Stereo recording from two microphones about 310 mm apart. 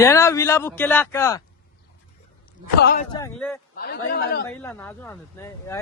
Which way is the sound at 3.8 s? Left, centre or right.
Left.